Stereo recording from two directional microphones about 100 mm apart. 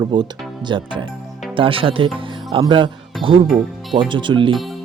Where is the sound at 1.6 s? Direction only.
65° right (ahead or behind).